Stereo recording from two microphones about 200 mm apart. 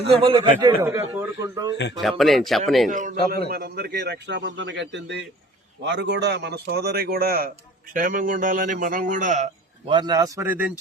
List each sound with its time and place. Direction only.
0.2 s a man's voice: 25° right (ahead or behind)
2.0 s speech: centre (ahead or behind)
2.9 s a man's voice: 40° right (ahead or behind)
9.9 s a man's voice: 20° right (ahead or behind)